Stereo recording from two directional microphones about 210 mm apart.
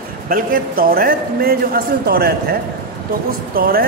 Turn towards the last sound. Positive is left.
turn(degrees=-45)  # may be behind; listen again after turning